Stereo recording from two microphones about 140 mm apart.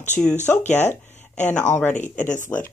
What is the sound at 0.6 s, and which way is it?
Speech, 55° left (ahead or behind).